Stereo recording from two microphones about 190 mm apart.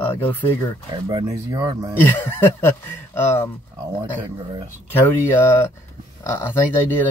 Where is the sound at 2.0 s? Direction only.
10° left (ahead or behind).